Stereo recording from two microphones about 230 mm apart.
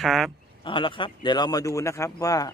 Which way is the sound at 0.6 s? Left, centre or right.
Left.